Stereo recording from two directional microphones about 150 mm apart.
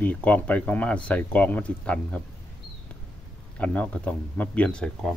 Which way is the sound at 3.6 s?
10° left (ahead or behind).